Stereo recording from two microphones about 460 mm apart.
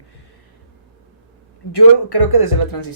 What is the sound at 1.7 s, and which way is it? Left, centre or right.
Speech, left.